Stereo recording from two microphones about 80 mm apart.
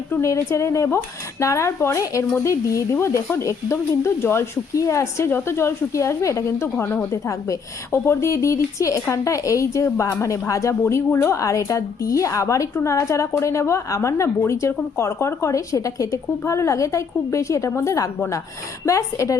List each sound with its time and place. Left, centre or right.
0.2 s speech: left
7.3 s a woman's voice: left